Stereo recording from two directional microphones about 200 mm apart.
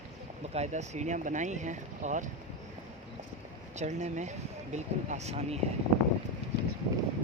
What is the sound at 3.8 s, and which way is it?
Speech, 35° right (ahead or behind).